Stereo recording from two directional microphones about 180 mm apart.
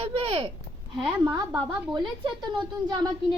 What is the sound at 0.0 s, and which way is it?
Speech, 30° right (ahead or behind).